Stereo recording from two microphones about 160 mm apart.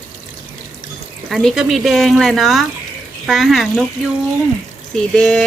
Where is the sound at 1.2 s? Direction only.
Centre (ahead or behind).